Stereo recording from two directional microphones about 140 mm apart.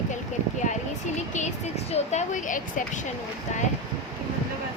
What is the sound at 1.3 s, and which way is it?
Speech, 55° left (ahead or behind).